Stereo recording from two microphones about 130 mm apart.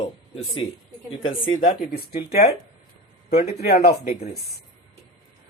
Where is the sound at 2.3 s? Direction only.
55° left (ahead or behind).